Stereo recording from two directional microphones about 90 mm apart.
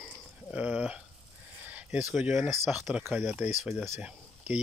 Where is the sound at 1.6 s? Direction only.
15° right (ahead or behind).